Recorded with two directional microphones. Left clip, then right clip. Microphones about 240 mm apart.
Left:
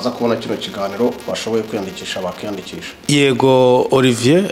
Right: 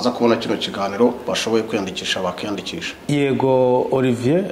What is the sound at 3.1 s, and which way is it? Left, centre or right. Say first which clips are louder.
Speech: left 5 dB; left.